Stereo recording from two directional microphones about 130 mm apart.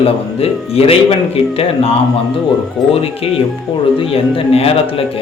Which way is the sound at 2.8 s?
Centre (ahead or behind).